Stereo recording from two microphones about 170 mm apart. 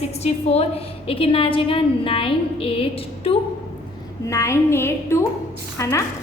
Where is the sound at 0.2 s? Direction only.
40° left (ahead or behind).